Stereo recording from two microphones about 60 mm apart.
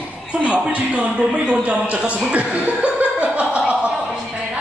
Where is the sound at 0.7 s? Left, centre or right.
Right.